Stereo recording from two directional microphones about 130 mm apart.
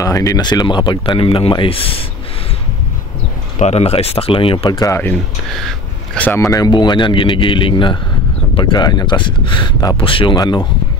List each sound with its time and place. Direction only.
0.0 s speech: 25° left (ahead or behind); by 2.0 s 45° left (ahead or behind)
3.5 s speech: 55° left (ahead or behind); by 4.9 s 30° left (ahead or behind)
4.9 s speech: 15° left (ahead or behind)
5.5 s a sound: centre (ahead or behind)
6.2 s speech: 20° left (ahead or behind)